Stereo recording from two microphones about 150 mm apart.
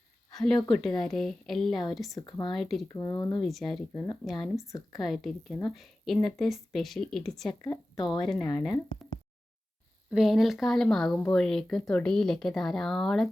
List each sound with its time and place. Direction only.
0.3 s speech: centre (ahead or behind)
2.1 s speech: 30° left (ahead or behind)
2.5 s speech: centre (ahead or behind)
2.9 s speech: 25° left (ahead or behind)
3.4 s speech: centre (ahead or behind)
10.1 s speech: centre (ahead or behind)